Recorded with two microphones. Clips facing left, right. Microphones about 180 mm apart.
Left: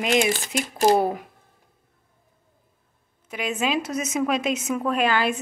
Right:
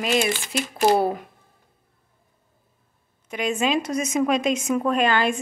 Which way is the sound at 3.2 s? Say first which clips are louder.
Right 2 dB; 5° left (ahead or behind).